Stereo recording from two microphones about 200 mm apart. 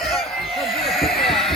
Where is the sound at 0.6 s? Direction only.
Centre (ahead or behind).